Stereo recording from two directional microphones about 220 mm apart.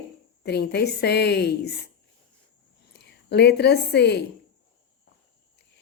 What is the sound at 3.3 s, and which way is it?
Speech, 50° left (ahead or behind).